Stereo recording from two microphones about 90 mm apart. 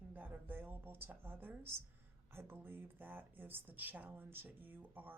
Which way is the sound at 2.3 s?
25° right (ahead or behind).